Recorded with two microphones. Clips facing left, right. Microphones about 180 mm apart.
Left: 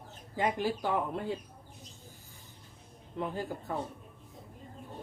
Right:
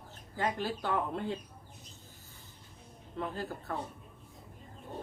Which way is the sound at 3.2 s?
15° left (ahead or behind).